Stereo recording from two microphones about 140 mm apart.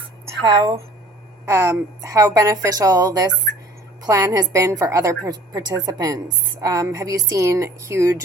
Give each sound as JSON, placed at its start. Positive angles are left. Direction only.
{"t": 0.4, "sound": "a woman's voice", "side_deg": -25}